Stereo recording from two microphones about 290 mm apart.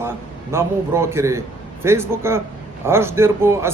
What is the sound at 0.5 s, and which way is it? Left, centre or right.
A man's voice, centre.